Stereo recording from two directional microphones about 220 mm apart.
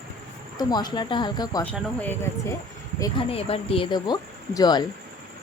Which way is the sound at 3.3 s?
25° left (ahead or behind).